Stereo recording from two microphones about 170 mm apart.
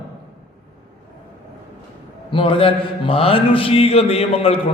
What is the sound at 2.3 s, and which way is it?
Mantra, 30° left (ahead or behind).